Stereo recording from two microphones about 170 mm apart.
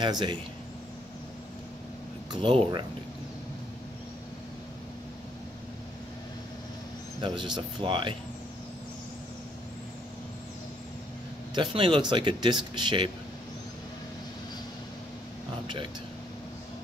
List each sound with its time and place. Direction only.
0.0 s speech: 25° right (ahead or behind)
2.4 s speech: 30° right (ahead or behind)
7.2 s speech: 25° right (ahead or behind)
11.5 s speech: 30° right (ahead or behind)
15.6 s speech: 30° right (ahead or behind)